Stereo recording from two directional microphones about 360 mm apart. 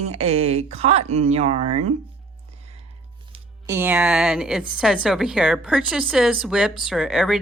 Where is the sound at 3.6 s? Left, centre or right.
Centre.